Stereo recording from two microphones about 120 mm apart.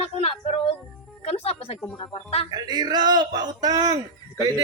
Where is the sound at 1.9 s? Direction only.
40° left (ahead or behind).